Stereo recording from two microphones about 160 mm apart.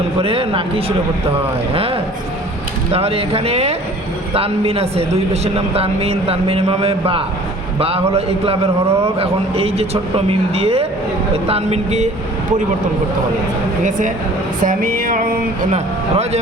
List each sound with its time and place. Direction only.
0.2 s a man's voice: 35° right (ahead or behind)
14.6 s music: 60° right (ahead or behind)
15.7 s speech: 40° right (ahead or behind)